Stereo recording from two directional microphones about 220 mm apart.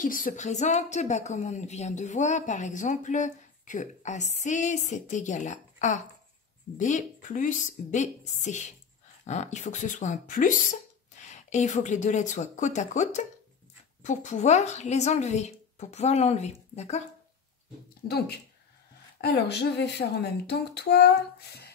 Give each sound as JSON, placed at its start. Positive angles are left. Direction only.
{"t": 0.0, "sound": "a woman's voice", "side_deg": 40}
{"t": 18.0, "sound": "speech", "side_deg": 45}